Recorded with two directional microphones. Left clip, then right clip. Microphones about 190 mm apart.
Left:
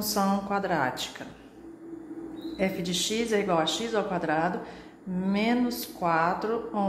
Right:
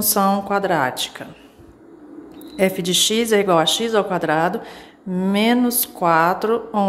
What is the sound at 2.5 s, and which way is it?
A woman's voice, 35° right (ahead or behind).